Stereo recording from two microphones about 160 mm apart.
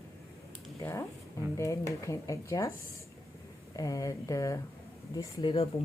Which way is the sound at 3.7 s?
20° left (ahead or behind).